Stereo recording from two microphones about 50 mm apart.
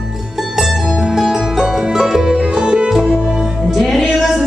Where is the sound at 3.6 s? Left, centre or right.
Centre.